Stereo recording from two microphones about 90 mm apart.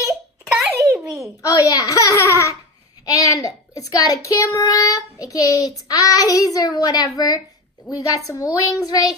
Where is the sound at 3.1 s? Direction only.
40° left (ahead or behind).